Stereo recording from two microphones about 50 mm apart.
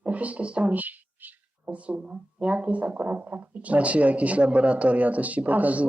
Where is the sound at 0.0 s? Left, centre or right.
Right.